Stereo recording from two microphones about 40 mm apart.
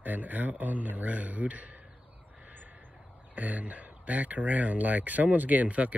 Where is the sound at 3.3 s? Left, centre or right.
Right.